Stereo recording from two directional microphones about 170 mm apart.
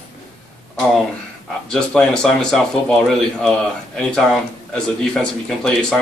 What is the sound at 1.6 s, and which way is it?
Speech, 5° left (ahead or behind).